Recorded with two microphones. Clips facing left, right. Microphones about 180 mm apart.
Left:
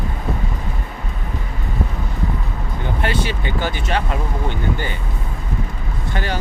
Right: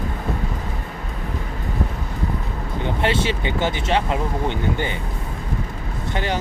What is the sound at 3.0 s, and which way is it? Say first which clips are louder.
Speech: right 2 dB; 25° right (ahead or behind).